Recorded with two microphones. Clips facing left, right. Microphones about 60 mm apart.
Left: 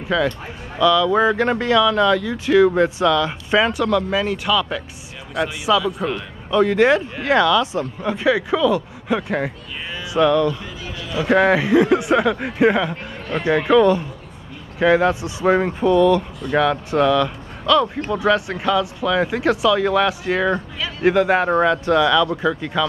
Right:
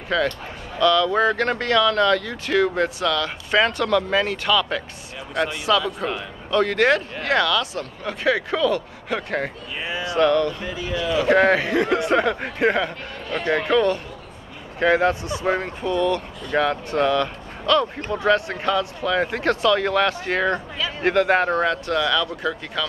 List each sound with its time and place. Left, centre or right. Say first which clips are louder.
0.1 s a man's voice: left 2 dB; centre
6.5 s speech: left 3 dB; centre
10.0 s music: left 2 dB; centre
10.9 s speech: right 10 dB; right
11.2 s a man's voice: left 3 dB; centre
15.2 s speech: left 5 dB; centre
15.8 s a man's voice: left 9 dB; centre
18.2 s speech: left 1 dB; centre